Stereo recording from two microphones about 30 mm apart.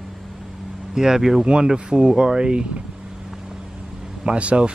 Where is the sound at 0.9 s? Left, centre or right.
Centre.